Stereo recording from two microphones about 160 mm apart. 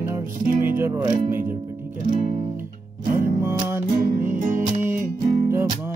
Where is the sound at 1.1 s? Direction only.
60° right (ahead or behind).